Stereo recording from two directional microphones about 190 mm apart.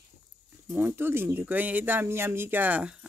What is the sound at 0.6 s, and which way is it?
Speech, 10° right (ahead or behind).